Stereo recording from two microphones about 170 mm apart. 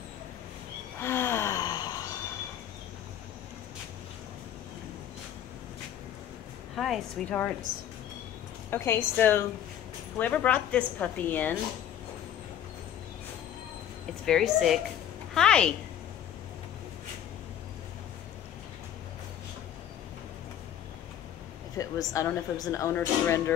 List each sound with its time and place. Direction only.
1.0 s gasp: 15° left (ahead or behind)
6.7 s a woman's voice: centre (ahead or behind)
8.6 s speech: 15° left (ahead or behind)
14.2 s a woman's voice: centre (ahead or behind)
21.7 s speech: 20° left (ahead or behind)